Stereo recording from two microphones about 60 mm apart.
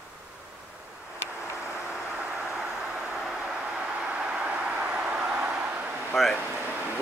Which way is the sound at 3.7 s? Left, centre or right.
Centre.